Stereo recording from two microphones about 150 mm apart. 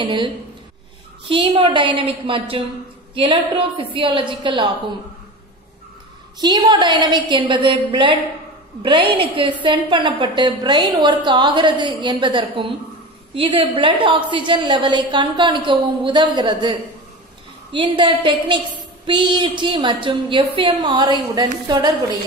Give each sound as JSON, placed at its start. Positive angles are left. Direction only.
{"t": 0.0, "sound": "a woman's voice", "side_deg": -30}
{"t": 1.3, "sound": "a woman's voice", "side_deg": -35}
{"t": 6.4, "sound": "a woman's voice", "side_deg": -30}
{"t": 17.7, "sound": "a woman's voice", "side_deg": -35}